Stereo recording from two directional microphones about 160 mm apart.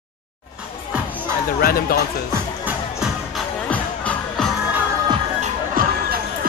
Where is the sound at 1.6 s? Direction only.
65° left (ahead or behind).